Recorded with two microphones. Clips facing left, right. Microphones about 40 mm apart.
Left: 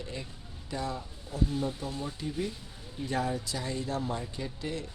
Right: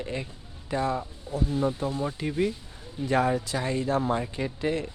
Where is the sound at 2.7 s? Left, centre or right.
Centre.